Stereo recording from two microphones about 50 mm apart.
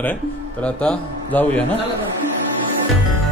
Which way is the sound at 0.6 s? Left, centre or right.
Left.